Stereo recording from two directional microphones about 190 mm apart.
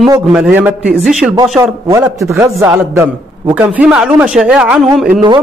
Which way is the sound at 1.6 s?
15° right (ahead or behind).